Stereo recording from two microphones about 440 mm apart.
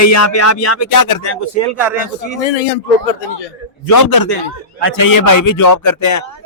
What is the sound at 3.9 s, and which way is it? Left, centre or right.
A man's voice, left.